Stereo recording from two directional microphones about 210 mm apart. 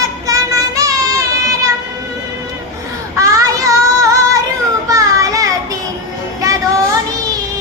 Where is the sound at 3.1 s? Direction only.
15° right (ahead or behind).